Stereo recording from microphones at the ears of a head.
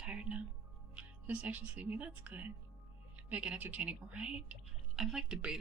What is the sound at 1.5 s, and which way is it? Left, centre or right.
Speech, right.